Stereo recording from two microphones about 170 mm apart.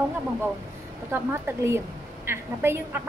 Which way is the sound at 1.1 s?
15° right (ahead or behind).